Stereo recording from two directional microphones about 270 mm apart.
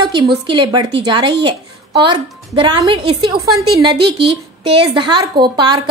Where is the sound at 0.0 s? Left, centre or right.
Centre.